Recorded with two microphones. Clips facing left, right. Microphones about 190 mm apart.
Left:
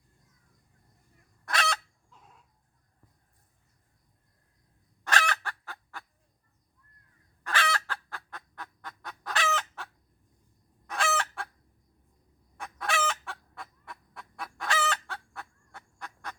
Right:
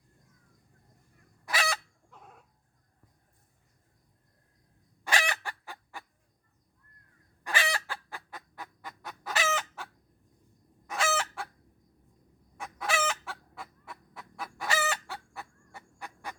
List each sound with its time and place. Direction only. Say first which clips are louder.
1.5 s chicken: left 1 dB; 5° right (ahead or behind)
2.0 s dog: right 5 dB; 60° right (ahead or behind)
5.0 s fowl: left 1 dB; 10° right (ahead or behind)
7.4 s fowl: left 1 dB; 15° right (ahead or behind)
12.5 s fowl: even; 5° right (ahead or behind)